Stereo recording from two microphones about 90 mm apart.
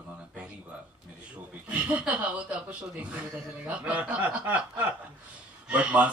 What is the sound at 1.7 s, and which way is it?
Speech, 15° right (ahead or behind).